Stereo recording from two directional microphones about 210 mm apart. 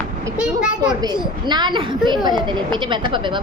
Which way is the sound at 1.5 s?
20° right (ahead or behind).